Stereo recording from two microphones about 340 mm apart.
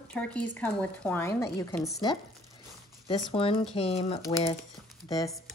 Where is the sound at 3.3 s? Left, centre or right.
Centre.